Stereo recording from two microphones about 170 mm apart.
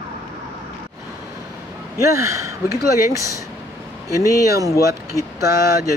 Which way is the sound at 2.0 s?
15° right (ahead or behind).